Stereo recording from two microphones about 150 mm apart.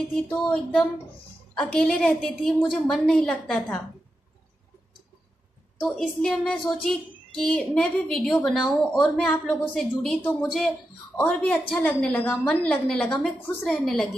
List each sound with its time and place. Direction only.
0.1 s a woman's voice: 5° left (ahead or behind)
5.8 s a woman's voice: 5° left (ahead or behind)